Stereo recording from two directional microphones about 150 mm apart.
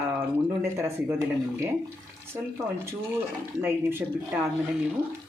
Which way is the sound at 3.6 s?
15° right (ahead or behind).